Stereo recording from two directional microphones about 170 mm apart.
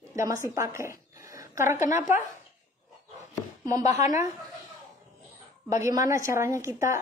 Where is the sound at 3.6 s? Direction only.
20° right (ahead or behind).